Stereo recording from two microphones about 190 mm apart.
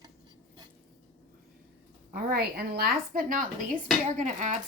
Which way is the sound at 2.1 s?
55° right (ahead or behind).